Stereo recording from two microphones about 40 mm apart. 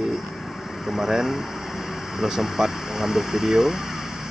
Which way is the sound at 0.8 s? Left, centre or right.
Centre.